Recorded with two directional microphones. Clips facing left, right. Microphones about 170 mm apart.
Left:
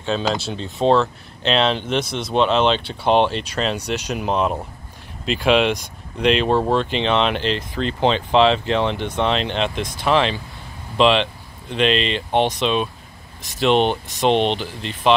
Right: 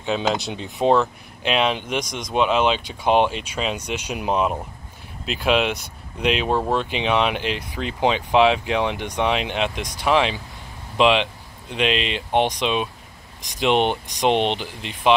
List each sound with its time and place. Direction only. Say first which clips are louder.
0.0 s speech: left 1 dB; 15° right (ahead or behind)